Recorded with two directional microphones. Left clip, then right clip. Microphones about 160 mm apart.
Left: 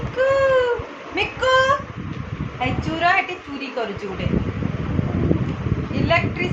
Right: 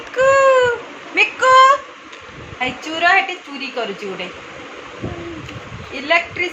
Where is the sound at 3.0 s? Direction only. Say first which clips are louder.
Right 4 dB; 35° right (ahead or behind).